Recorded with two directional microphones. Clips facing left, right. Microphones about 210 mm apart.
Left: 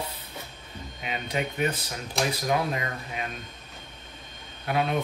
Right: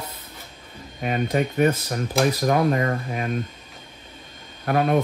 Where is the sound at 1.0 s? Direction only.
45° right (ahead or behind).